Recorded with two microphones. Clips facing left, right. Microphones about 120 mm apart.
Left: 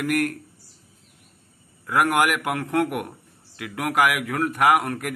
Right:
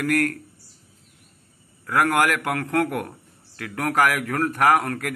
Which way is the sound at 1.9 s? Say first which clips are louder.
Even; 15° left (ahead or behind).